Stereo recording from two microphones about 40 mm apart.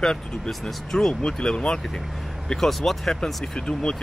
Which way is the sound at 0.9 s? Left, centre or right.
Centre.